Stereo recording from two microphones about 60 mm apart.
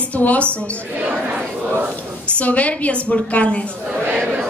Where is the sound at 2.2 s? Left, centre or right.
Left.